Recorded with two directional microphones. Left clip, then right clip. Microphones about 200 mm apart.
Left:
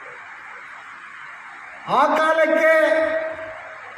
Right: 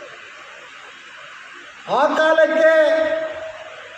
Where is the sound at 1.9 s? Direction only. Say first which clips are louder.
Right 1 dB; 55° left (ahead or behind).